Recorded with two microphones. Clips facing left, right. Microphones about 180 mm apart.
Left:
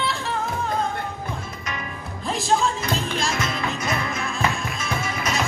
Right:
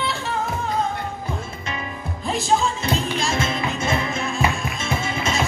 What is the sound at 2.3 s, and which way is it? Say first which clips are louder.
Music: right 1 dB; centre (ahead or behind).